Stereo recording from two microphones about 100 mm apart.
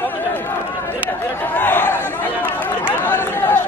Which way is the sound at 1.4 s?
20° left (ahead or behind).